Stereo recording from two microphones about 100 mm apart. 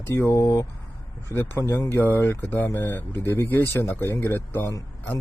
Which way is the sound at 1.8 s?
30° left (ahead or behind).